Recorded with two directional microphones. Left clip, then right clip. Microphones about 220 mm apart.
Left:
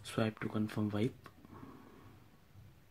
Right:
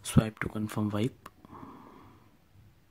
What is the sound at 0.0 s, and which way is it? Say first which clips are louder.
Speech: right 6 dB; 30° right (ahead or behind).